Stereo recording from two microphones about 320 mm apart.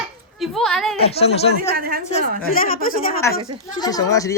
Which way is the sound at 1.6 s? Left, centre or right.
Right.